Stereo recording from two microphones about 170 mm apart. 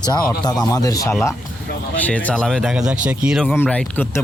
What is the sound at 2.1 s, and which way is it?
Speech, 10° left (ahead or behind).